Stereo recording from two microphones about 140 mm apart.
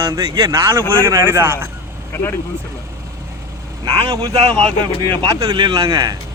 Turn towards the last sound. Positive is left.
turn(degrees=-25)  # may be behind; listen again after turning